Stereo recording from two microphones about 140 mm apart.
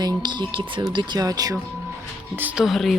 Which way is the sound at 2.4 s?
10° right (ahead or behind).